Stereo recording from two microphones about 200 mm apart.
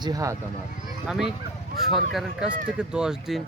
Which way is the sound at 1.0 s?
Centre (ahead or behind).